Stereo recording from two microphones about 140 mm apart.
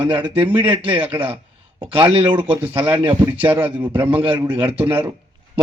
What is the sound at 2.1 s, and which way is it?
Speech, 35° right (ahead or behind).